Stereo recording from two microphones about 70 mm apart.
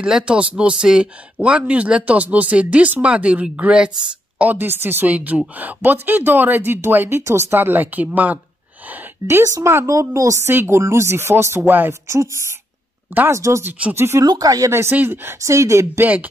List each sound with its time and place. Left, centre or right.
0.0 s speech: centre; by 7.4 s right
7.5 s speech: right
9.5 s a woman's voice: right
10.4 s speech: right
12.1 s a woman's voice: right
14.2 s speech: right
14.7 s speech: right
15.4 s a woman's voice: right
16.0 s speech: right